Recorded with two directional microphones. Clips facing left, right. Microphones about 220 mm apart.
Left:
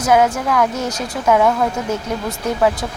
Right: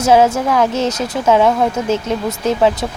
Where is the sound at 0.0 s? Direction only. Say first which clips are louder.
Right 3 dB; 25° right (ahead or behind).